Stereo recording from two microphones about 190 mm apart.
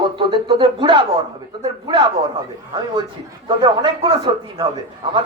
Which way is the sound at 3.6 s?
25° right (ahead or behind).